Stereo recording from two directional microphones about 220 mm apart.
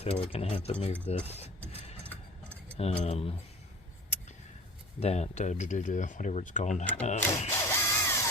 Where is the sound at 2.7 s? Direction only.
30° left (ahead or behind).